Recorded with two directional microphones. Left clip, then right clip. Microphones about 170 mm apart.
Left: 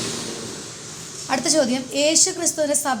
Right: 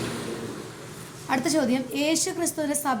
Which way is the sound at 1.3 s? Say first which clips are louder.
Left 4 dB; 15° left (ahead or behind).